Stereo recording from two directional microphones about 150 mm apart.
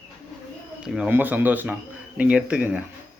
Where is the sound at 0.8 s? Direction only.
10° right (ahead or behind).